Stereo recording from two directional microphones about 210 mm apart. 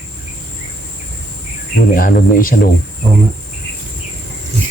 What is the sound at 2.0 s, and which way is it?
Speech, 40° left (ahead or behind).